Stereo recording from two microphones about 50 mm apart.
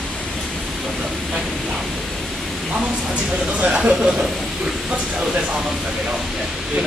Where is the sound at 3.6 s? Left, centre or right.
Centre.